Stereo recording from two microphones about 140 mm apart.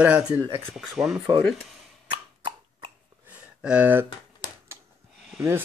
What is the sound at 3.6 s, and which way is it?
Speech, 10° right (ahead or behind).